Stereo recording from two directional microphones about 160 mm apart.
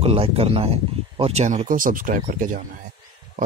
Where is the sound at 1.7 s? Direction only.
60° right (ahead or behind).